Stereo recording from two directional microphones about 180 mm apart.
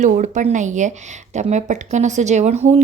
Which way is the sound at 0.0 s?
45° right (ahead or behind).